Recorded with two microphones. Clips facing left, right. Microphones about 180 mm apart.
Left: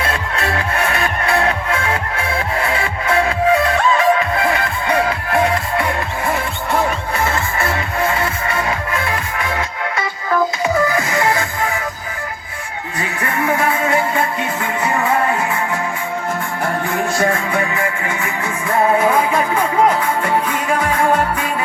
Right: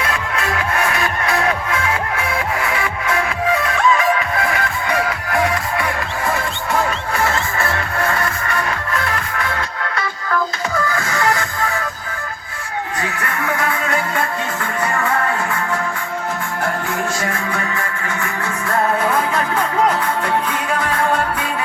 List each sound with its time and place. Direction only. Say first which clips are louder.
0.0 s music: left 1 dB; 35° left (ahead or behind)
7.9 s music: left 2 dB; 20° left (ahead or behind)
13.2 s music: left 6 dB; 25° left (ahead or behind)
17.6 s music: left 4 dB; 20° left (ahead or behind)